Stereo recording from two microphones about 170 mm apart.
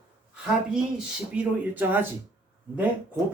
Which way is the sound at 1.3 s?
10° right (ahead or behind).